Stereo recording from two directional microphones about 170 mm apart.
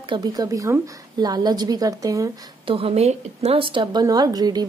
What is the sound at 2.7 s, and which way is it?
A woman's voice, 35° right (ahead or behind).